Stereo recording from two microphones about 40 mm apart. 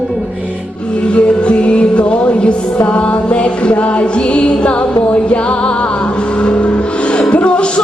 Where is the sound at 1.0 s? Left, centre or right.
Left.